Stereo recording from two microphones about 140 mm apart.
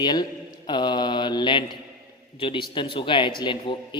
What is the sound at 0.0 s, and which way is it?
A man's voice, 30° left (ahead or behind).